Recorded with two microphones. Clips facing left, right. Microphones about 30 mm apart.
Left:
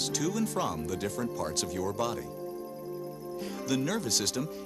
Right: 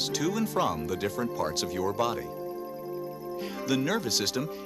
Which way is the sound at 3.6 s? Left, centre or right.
Centre.